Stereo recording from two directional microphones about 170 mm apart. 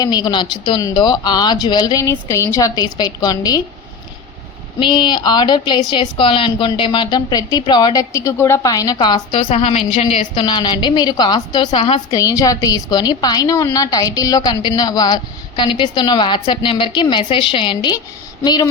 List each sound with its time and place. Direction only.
0.0 s a woman's voice: 25° left (ahead or behind)
4.8 s a woman's voice: 25° left (ahead or behind)